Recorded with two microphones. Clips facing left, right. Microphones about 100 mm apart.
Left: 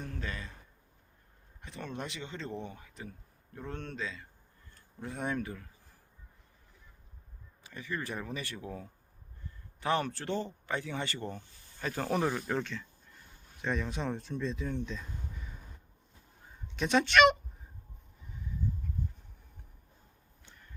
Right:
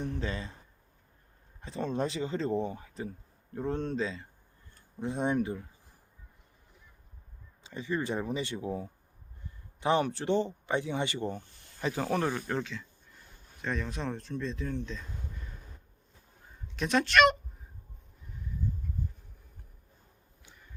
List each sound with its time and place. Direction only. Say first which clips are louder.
0.0 s speech: right 6 dB; 25° right (ahead or behind)
1.6 s speech: right 8 dB; 30° right (ahead or behind)
7.6 s speech: right 6 dB; 25° right (ahead or behind)
12.1 s speech: left 2 dB; 5° left (ahead or behind)
16.6 s speech: even; centre (ahead or behind)
20.4 s a sound: even; 10° right (ahead or behind)